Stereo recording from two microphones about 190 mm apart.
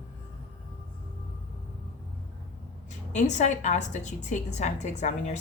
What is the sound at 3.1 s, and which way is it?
A woman's voice, 40° left (ahead or behind).